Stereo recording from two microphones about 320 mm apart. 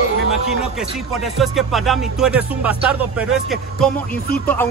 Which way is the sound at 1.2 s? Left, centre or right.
Centre.